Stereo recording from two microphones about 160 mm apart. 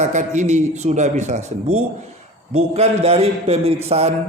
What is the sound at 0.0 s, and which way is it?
A man's voice, 50° right (ahead or behind).